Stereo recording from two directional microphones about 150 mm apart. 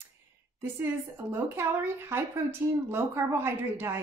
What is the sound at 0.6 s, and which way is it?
A woman's voice, 15° right (ahead or behind).